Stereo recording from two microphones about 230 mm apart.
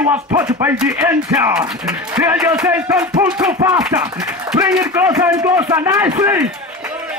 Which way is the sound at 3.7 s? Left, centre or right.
Centre.